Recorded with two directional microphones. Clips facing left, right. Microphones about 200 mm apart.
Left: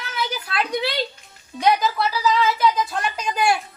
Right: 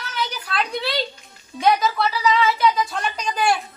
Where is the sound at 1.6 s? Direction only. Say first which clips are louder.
Even; centre (ahead or behind).